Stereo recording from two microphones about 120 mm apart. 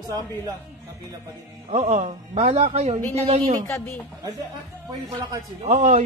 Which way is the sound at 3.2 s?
75° right (ahead or behind).